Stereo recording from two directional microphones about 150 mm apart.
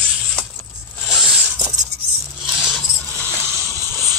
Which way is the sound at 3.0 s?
10° left (ahead or behind).